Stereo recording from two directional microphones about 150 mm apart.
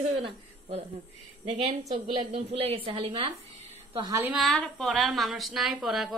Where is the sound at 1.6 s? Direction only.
45° right (ahead or behind).